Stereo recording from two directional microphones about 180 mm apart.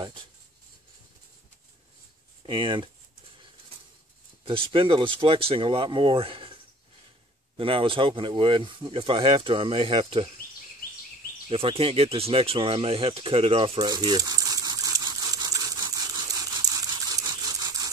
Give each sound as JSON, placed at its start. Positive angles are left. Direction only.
{"t": 2.4, "sound": "speech", "side_deg": -30}
{"t": 4.5, "sound": "speech", "side_deg": -30}
{"t": 11.4, "sound": "speech", "side_deg": -30}
{"t": 13.7, "sound": "a sound", "side_deg": -20}